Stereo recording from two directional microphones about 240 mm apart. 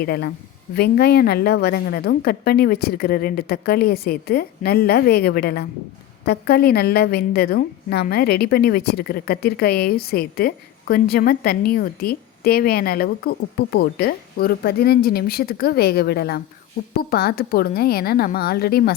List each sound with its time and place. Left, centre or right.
0.0 s a woman's voice: left